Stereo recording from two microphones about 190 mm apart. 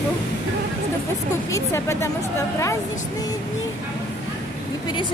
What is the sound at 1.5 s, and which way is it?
Speech, 15° left (ahead or behind).